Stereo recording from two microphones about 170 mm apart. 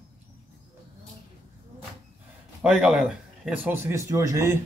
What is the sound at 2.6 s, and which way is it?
Speech, 5° right (ahead or behind).